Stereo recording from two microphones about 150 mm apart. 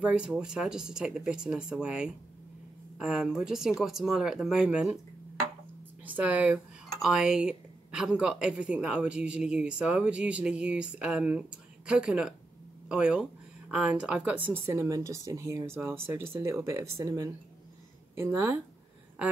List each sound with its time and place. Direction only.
0.0 s speech: 10° right (ahead or behind)
6.0 s speech: 10° right (ahead or behind)